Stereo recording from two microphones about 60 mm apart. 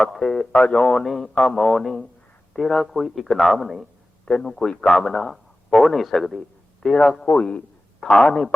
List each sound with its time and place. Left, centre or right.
0.0 s a man's voice: centre
4.3 s a man's voice: centre
7.3 s a man's voice: left
8.0 s a man's voice: centre